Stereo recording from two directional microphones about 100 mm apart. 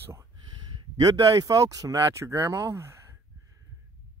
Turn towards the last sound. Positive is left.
turn(degrees=-30)  # may be behind; listen again after turning